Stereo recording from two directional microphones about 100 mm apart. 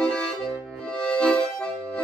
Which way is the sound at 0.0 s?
10° left (ahead or behind).